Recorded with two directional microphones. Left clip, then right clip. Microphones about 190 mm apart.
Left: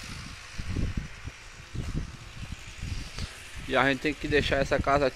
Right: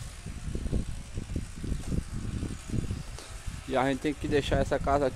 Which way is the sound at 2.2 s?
40° right (ahead or behind).